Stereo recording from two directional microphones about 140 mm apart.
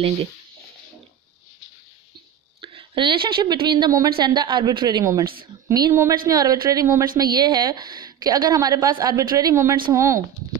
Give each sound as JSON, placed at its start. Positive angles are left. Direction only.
{"t": 2.6, "sound": "a woman's voice", "side_deg": -40}